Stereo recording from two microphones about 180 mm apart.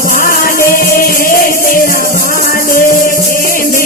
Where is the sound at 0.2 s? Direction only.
50° left (ahead or behind).